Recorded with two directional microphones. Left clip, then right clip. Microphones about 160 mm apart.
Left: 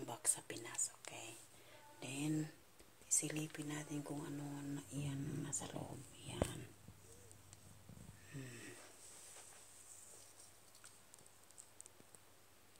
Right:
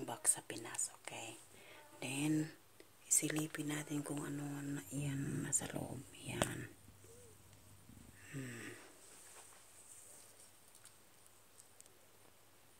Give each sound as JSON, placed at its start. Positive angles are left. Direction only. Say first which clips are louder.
{"t": 0.0, "sound": "whispering", "louder": "right 3 dB", "side_deg": -25}
{"t": 2.0, "sound": "a sound", "louder": "right 5 dB", "side_deg": -50}
{"t": 3.1, "sound": "speech", "louder": "right 4 dB", "side_deg": -60}
{"t": 8.3, "sound": "wheeze", "louder": "right 5 dB", "side_deg": -50}